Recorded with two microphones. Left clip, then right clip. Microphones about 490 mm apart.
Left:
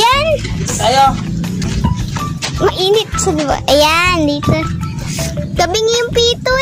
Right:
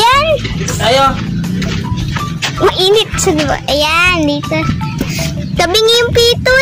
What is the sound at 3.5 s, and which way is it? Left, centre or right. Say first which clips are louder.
Speech: left 2 dB; left.